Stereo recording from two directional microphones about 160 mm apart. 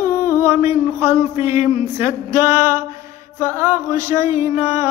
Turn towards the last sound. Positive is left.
turn(degrees=-15)  # may be behind; listen again after turning